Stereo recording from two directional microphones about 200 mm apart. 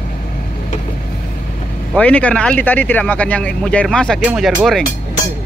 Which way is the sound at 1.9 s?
5° left (ahead or behind).